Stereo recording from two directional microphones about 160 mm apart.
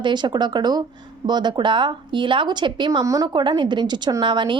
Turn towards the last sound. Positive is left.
turn(degrees=-30)  # may be behind; listen again after turning